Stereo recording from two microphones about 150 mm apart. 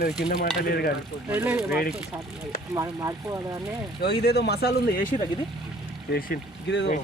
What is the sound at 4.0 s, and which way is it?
Speech, 90° left.